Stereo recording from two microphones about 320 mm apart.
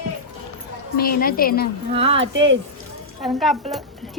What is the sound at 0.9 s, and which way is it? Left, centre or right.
Speech, left.